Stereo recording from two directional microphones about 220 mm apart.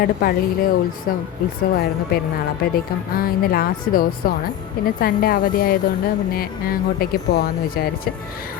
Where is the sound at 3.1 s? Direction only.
45° left (ahead or behind).